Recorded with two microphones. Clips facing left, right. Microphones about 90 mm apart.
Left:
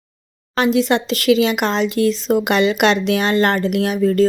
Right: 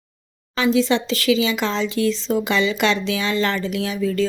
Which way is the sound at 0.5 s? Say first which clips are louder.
Left 2 dB; 60° left (ahead or behind).